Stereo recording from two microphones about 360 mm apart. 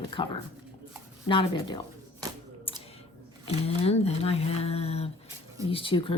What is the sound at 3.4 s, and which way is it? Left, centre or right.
Speech, centre.